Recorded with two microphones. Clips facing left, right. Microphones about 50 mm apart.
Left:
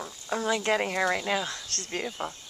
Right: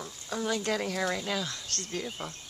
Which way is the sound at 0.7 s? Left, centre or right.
Left.